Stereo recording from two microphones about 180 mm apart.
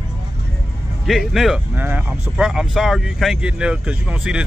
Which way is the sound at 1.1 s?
Centre (ahead or behind).